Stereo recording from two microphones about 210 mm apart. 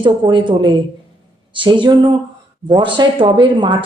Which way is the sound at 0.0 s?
25° right (ahead or behind).